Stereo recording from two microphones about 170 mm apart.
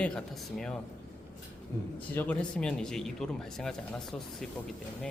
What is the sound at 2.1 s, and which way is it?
Speech, 10° left (ahead or behind).